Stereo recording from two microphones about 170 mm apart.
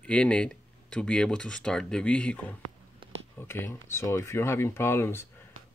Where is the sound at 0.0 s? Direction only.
5° left (ahead or behind).